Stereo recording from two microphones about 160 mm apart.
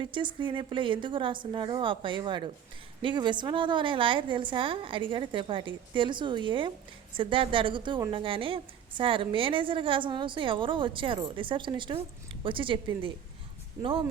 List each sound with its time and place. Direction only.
0.0 s a woman's voice: 30° right (ahead or behind)